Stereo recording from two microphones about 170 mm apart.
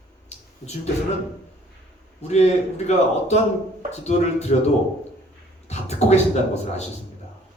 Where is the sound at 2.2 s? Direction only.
40° left (ahead or behind).